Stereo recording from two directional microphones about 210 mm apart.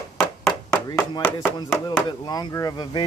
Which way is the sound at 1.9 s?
20° left (ahead or behind).